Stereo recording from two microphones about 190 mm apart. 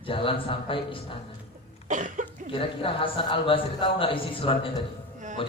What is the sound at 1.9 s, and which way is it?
Cough, 40° right (ahead or behind).